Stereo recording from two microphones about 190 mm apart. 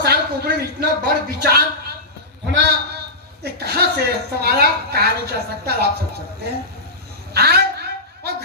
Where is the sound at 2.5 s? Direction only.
60° right (ahead or behind).